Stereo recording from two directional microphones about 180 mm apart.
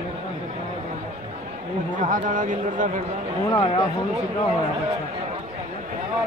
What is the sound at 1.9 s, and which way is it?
Speech, 45° right (ahead or behind).